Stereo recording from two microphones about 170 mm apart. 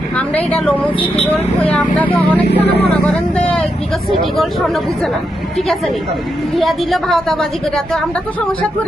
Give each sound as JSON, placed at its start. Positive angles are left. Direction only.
{"t": 0.5, "sound": "speech", "side_deg": 5}
{"t": 0.9, "sound": "speech", "side_deg": 35}
{"t": 1.6, "sound": "speech", "side_deg": 10}
{"t": 3.1, "sound": "speech", "side_deg": 5}
{"t": 6.6, "sound": "a woman's voice", "side_deg": 0}